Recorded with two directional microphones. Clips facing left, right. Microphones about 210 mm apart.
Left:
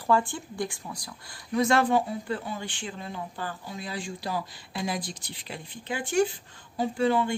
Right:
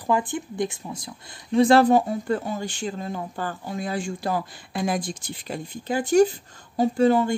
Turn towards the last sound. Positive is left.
turn(degrees=-40)  # may be behind; listen again after turning